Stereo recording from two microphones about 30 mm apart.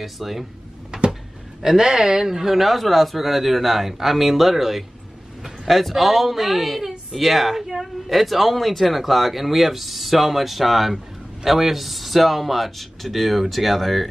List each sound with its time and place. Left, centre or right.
0.0 s a man's voice: centre
1.6 s speech: right
2.2 s a man's voice: centre